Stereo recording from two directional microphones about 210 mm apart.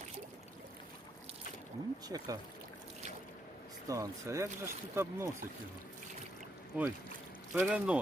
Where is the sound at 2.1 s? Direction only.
15° right (ahead or behind).